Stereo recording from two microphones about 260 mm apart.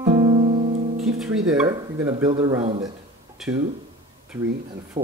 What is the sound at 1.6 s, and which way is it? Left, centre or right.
Speech, centre.